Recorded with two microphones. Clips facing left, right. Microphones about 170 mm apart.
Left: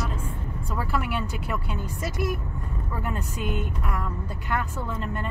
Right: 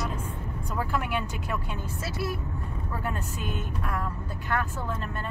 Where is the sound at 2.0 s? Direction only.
15° left (ahead or behind).